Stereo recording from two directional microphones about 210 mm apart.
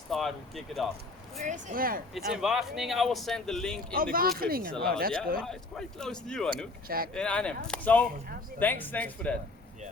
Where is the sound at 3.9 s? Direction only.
45° right (ahead or behind).